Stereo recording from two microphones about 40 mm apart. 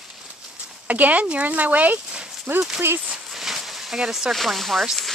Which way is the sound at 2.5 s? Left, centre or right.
Right.